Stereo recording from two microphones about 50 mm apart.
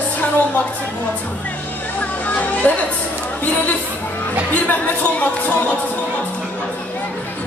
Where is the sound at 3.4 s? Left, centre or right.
Left.